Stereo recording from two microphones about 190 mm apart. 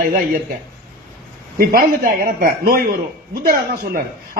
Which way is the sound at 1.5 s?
50° right (ahead or behind).